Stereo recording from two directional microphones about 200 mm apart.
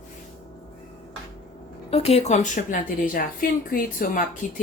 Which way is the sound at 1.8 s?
30° left (ahead or behind).